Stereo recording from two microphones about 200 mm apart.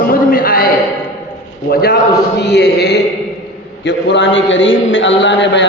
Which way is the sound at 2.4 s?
60° left (ahead or behind).